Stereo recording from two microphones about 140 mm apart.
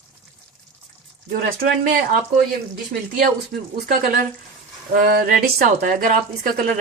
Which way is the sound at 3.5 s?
75° right (ahead or behind).